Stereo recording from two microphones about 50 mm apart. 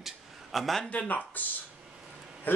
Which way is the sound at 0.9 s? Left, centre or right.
Left.